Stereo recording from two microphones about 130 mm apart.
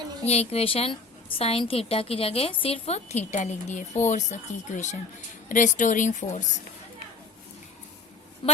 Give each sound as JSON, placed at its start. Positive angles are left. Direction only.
{"t": 0.3, "sound": "a woman's voice", "side_deg": 55}